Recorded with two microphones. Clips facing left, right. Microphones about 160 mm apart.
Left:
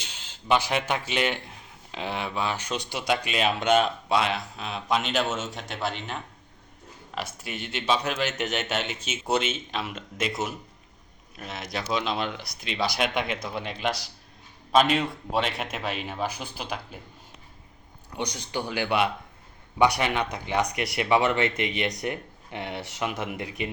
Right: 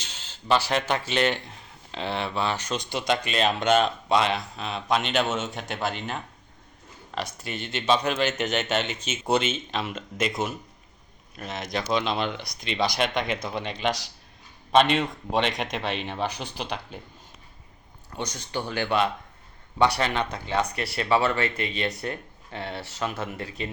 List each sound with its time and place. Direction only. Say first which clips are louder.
0.0 s speech: right 1 dB; 10° left (ahead or behind)
7.4 s speech: right 3 dB; 5° left (ahead or behind)
11.3 s speech: right 3 dB; 5° left (ahead or behind)
18.1 s speech: left 1 dB; 15° left (ahead or behind)